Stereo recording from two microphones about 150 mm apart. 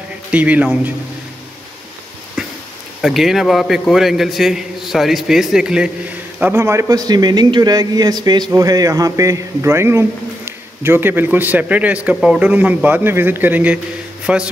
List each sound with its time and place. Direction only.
0.3 s a man's voice: 10° right (ahead or behind)
3.0 s a man's voice: centre (ahead or behind)
6.4 s a man's voice: 15° right (ahead or behind)